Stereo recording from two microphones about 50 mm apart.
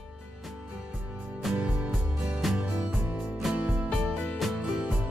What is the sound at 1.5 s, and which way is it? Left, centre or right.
Music, centre.